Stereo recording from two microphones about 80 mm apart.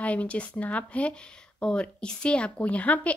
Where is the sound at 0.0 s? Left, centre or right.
Centre.